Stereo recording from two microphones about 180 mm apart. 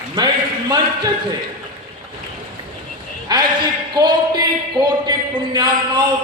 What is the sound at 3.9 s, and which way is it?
Speech, 25° right (ahead or behind).